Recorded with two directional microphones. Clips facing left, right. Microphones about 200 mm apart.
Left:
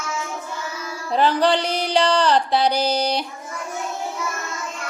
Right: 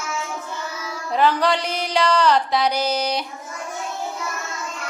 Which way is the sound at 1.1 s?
30° left (ahead or behind).